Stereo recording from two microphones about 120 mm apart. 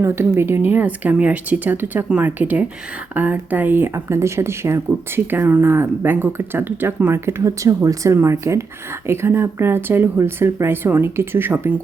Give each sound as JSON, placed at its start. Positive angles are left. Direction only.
{"t": 0.0, "sound": "speech", "side_deg": -20}